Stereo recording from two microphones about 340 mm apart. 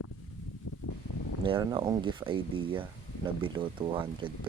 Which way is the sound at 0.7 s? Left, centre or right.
Left.